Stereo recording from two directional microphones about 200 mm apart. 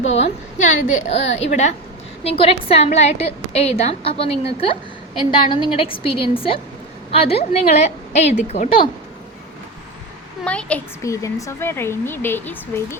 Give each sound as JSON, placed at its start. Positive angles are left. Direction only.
{"t": 0.1, "sound": "a woman's voice", "side_deg": 30}
{"t": 10.4, "sound": "a woman's voice", "side_deg": 5}